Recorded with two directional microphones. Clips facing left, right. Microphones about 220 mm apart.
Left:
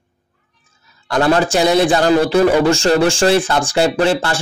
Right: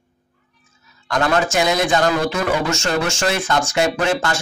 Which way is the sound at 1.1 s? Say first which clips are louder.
Left 4 dB; 35° left (ahead or behind).